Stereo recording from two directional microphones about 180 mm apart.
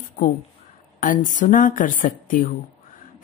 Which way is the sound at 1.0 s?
45° left (ahead or behind).